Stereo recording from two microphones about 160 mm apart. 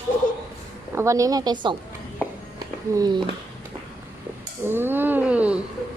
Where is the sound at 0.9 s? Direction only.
20° right (ahead or behind).